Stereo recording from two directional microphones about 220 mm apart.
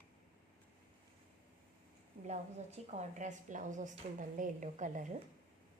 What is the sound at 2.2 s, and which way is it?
A woman's voice, 30° right (ahead or behind).